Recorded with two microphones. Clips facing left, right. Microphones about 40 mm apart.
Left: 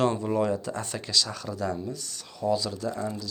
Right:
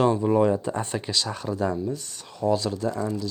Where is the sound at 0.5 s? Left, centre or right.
Right.